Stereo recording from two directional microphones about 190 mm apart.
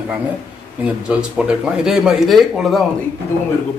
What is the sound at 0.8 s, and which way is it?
Speech, 5° right (ahead or behind).